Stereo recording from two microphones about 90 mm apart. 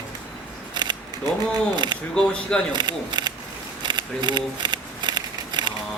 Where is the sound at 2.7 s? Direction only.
55° right (ahead or behind).